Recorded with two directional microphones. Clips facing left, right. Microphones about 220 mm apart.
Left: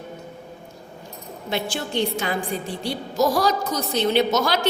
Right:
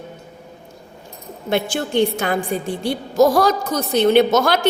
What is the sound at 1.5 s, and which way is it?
A woman's voice, 55° right (ahead or behind).